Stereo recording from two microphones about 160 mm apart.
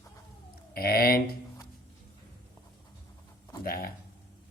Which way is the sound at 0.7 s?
70° left (ahead or behind).